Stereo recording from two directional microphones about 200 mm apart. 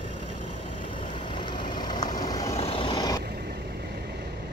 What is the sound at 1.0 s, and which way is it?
Vehicle, 25° left (ahead or behind).